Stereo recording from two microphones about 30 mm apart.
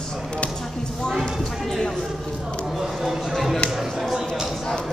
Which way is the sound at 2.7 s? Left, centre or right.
Centre.